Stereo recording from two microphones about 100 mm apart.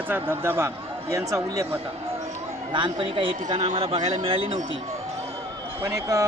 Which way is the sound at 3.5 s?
75° right (ahead or behind).